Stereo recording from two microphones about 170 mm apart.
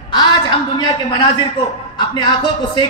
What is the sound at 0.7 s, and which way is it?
A woman's voice, 25° left (ahead or behind).